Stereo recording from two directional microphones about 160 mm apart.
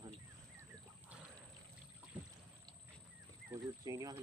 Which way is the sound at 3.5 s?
20° right (ahead or behind).